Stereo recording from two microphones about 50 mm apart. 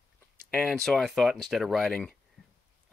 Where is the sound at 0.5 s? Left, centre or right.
Centre.